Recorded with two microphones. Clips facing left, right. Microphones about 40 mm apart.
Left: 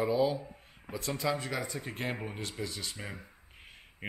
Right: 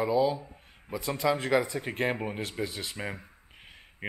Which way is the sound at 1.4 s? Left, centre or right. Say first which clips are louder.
Right 10 dB; right.